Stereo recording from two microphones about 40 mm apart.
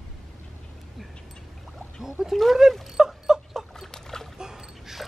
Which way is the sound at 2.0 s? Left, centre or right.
Centre.